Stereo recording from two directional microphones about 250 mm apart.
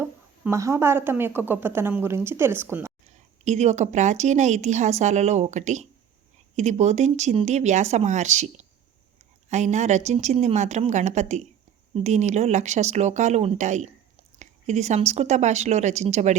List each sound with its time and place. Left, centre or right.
0.0 s speech: centre
3.1 s a woman's voice: right